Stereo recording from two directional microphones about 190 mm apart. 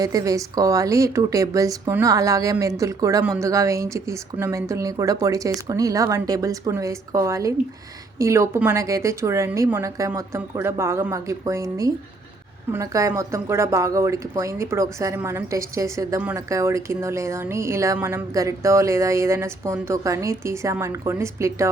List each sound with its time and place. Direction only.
0.0 s speech: 20° right (ahead or behind)